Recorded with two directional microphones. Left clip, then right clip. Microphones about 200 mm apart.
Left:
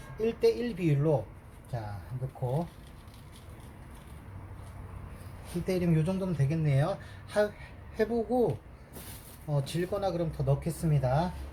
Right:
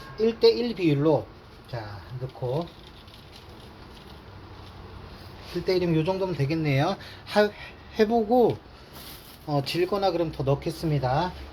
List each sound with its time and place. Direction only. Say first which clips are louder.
0.2 s speech: right 6 dB; 20° right (ahead or behind)
5.6 s speech: right 7 dB; 15° right (ahead or behind); by 8.4 s 35° right (ahead or behind)
9.5 s speech: right 7 dB; 40° right (ahead or behind); by 11.3 s 15° right (ahead or behind)